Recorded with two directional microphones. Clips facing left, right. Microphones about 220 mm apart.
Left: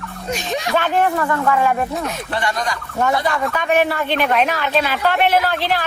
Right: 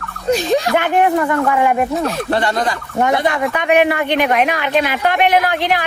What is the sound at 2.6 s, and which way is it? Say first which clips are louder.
Speech: right 3 dB; 20° right (ahead or behind).